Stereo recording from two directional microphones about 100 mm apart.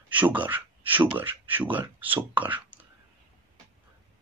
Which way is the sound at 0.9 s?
20° right (ahead or behind).